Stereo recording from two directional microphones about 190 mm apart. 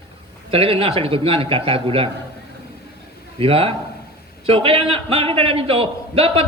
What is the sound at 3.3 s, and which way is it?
A man's voice, 30° right (ahead or behind).